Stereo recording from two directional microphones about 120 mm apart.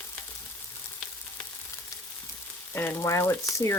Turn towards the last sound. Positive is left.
turn(degrees=25)  # may be behind; listen again after turning